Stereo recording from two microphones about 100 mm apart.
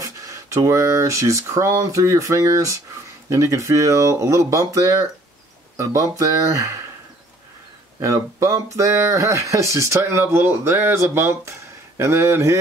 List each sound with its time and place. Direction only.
0.0 s speech: 30° right (ahead or behind)
8.0 s speech: 30° right (ahead or behind)